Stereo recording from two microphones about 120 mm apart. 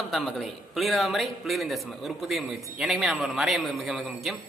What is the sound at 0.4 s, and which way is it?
A man's voice, centre (ahead or behind).